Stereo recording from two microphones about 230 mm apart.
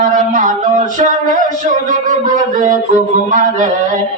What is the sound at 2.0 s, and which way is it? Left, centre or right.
Speech, right.